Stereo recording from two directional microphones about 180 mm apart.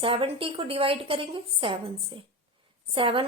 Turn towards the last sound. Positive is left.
turn(degrees=-30)  # may be behind; listen again after turning